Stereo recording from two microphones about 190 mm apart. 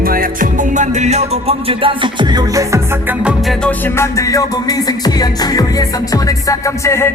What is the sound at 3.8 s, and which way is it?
Music, 15° left (ahead or behind).